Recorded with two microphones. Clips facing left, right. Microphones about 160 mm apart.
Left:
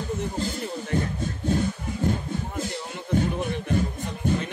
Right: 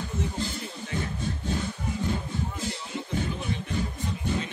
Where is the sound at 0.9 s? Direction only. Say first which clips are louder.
Left 6 dB; 50° left (ahead or behind).